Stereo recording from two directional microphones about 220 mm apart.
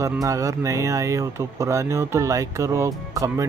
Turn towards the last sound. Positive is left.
turn(degrees=-15)  # may be behind; listen again after turning